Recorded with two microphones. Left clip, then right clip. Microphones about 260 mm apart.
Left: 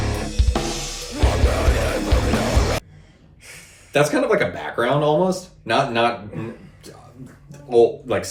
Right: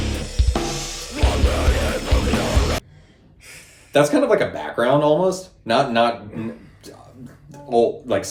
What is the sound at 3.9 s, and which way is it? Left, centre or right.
Speech, centre.